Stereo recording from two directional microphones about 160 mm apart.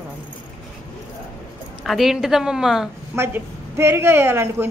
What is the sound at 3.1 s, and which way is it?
Speech, 15° right (ahead or behind).